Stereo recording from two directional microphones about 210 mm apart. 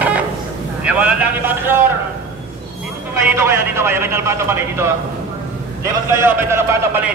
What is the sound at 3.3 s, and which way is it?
A man's voice, 10° right (ahead or behind).